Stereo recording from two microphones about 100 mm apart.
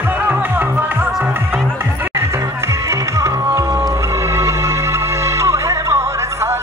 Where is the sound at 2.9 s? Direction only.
30° right (ahead or behind).